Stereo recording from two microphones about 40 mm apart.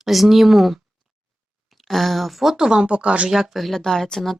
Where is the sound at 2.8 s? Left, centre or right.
Right.